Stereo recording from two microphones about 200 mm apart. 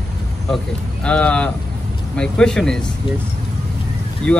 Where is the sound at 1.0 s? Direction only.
5° left (ahead or behind).